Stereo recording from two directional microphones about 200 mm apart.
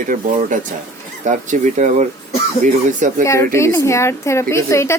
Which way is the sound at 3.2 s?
15° left (ahead or behind).